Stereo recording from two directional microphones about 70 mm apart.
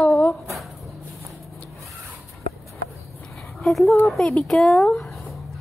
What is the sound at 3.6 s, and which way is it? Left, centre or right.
A woman's voice, centre.